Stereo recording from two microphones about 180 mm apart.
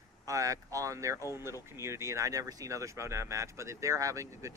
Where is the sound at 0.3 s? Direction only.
20° right (ahead or behind).